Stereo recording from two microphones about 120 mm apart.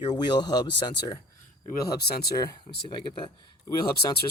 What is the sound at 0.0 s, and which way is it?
Speech, 35° left (ahead or behind).